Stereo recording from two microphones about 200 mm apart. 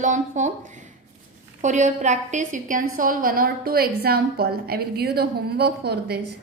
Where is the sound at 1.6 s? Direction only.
35° right (ahead or behind); by 6.2 s 55° right (ahead or behind).